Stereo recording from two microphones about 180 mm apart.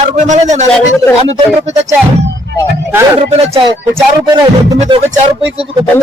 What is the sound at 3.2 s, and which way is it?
Speech, 30° right (ahead or behind).